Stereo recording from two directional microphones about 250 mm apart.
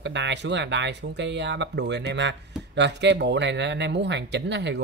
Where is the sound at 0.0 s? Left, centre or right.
Right.